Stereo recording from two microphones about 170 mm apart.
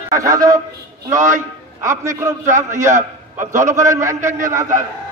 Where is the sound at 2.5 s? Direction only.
45° right (ahead or behind).